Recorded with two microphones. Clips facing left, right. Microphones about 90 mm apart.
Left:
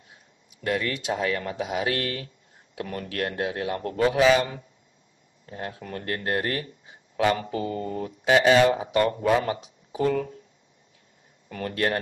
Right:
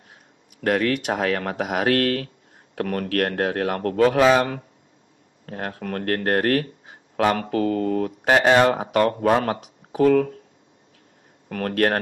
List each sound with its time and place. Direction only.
0.1 s speech: 55° right (ahead or behind)
11.4 s speech: 55° right (ahead or behind)